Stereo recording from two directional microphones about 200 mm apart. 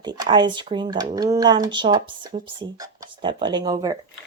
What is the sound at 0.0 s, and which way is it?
Speech, 20° right (ahead or behind).